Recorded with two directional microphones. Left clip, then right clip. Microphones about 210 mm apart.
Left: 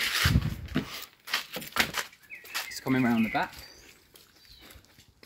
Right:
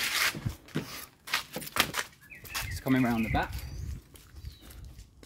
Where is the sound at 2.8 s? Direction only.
15° right (ahead or behind).